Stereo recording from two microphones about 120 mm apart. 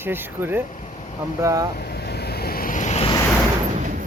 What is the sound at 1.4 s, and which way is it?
Speech, 25° right (ahead or behind).